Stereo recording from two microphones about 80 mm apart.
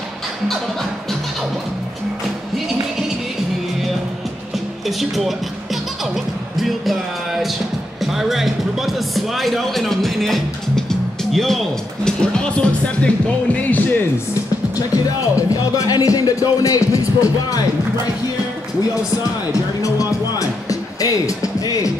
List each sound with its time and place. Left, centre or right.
4.8 s speech: centre
6.1 s music: centre
8.0 s a man's voice: centre; by 13.8 s left
15.3 s speech: left
19.5 s speech: left